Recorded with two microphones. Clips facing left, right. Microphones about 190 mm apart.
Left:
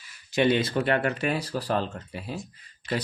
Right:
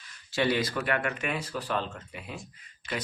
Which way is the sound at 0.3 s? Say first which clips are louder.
Left 4 dB; 20° left (ahead or behind).